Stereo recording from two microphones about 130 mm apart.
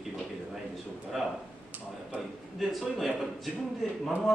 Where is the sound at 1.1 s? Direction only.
Centre (ahead or behind).